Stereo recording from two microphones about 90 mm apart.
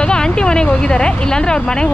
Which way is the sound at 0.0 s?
10° left (ahead or behind).